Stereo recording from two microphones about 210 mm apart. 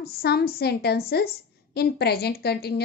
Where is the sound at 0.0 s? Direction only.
50° left (ahead or behind).